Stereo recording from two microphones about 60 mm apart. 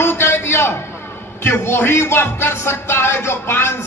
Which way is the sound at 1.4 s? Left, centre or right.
Left.